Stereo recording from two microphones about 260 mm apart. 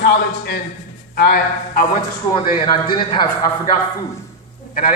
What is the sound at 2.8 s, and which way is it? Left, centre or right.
Speech, centre.